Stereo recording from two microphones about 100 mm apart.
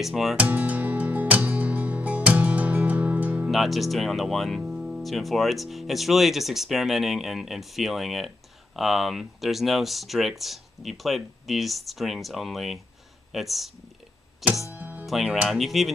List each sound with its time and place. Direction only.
0.0 s speech: centre (ahead or behind)
0.4 s music: 15° right (ahead or behind)
3.4 s speech: centre (ahead or behind)
14.7 s music: 15° right (ahead or behind)
15.0 s speech: 5° right (ahead or behind)